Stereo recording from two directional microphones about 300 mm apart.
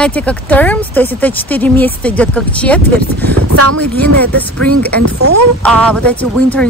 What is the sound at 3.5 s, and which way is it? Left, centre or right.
Speech, right.